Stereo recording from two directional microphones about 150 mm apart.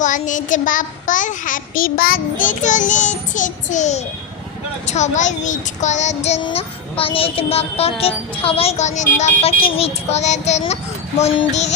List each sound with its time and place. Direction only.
0.0 s a child's voice: 55° left (ahead or behind)
6.4 s music: 40° left (ahead or behind)
11.2 s speech: 45° left (ahead or behind)